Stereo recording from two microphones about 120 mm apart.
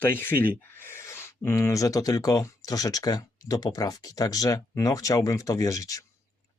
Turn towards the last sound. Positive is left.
turn(degrees=30)  # may be behind; listen again after turning